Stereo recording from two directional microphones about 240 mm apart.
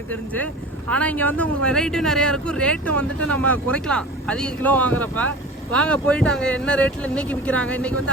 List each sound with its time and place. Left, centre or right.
0.1 s speech: centre
2.9 s speech: right
3.3 s speech: centre